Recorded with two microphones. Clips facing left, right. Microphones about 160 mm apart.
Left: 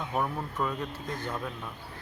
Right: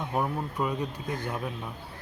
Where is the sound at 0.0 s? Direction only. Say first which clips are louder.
Right 2 dB; 10° right (ahead or behind).